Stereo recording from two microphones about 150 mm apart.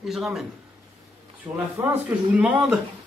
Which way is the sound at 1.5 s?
15° right (ahead or behind).